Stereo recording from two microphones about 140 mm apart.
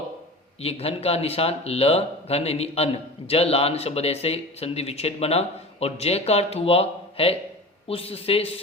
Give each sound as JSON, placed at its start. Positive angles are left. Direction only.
{"t": 0.6, "sound": "speech", "side_deg": 45}